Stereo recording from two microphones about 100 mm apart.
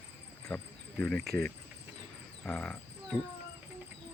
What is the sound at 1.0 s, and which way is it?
Speech, 5° left (ahead or behind).